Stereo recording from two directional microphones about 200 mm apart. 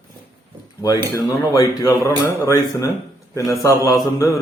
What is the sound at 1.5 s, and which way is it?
Mantra, 15° left (ahead or behind).